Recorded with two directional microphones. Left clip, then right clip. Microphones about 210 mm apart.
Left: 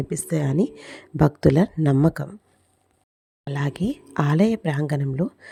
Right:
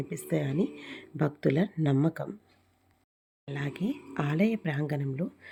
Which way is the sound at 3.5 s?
40° left (ahead or behind).